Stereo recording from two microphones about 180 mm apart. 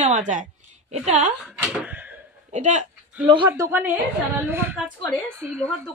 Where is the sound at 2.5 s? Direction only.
40° right (ahead or behind).